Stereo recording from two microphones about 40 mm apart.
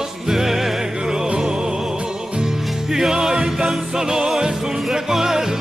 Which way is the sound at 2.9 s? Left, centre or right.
Centre.